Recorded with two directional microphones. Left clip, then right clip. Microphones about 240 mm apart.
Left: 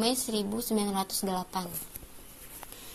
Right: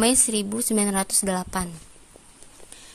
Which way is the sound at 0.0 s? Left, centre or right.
Right.